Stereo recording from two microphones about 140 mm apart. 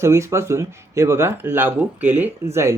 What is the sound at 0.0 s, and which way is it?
Speech, 20° right (ahead or behind).